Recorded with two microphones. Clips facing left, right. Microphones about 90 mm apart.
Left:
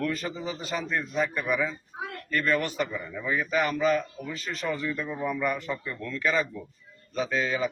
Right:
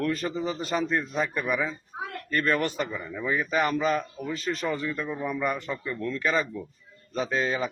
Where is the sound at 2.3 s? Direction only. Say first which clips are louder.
Right 1 dB; 30° right (ahead or behind).